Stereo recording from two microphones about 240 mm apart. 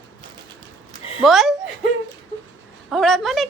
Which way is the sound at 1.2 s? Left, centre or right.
Centre.